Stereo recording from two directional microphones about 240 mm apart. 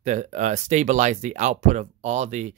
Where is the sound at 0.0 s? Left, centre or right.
Right.